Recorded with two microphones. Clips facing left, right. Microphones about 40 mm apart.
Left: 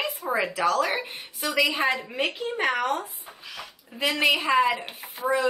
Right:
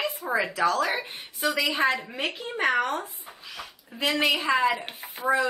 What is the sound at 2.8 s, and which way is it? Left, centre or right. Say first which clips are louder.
A woman's voice: left 2 dB; centre.